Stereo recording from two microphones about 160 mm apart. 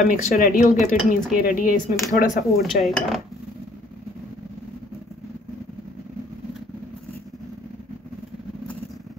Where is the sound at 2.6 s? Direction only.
Centre (ahead or behind).